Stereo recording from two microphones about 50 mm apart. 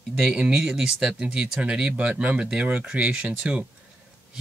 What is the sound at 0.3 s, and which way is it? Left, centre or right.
Speech, right.